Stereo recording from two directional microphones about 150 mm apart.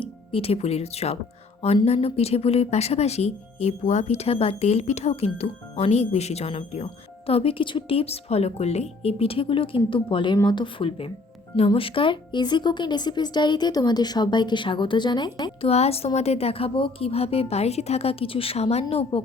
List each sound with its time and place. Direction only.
0.0 s a woman's voice: 40° left (ahead or behind)
15.6 s a woman's voice: 45° left (ahead or behind)